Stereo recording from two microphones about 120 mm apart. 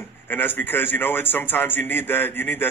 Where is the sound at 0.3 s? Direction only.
15° left (ahead or behind).